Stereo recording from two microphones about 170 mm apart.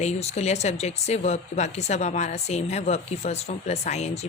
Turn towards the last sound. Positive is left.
turn(degrees=40)  # may be behind; listen again after turning